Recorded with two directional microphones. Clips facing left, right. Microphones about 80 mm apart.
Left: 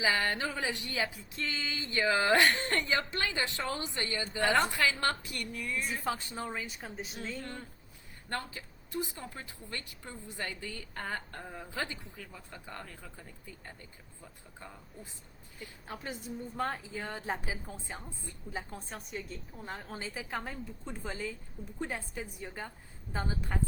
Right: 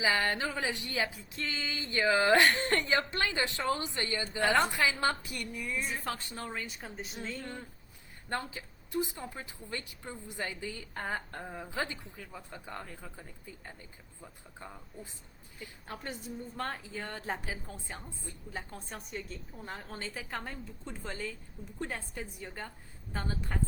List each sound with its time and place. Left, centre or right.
0.0 s a woman's voice: right
6.1 s a woman's voice: centre
6.4 s a woman's voice: centre
8.3 s a woman's voice: centre
11.7 s a woman's voice: centre
15.9 s a woman's voice: centre